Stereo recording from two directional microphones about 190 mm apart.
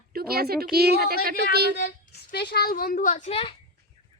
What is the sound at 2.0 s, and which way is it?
A woman's voice, 60° left (ahead or behind).